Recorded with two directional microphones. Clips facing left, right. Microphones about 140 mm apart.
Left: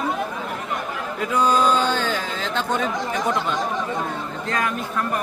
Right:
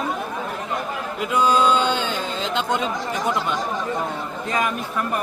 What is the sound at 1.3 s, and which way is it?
Speech, centre (ahead or behind).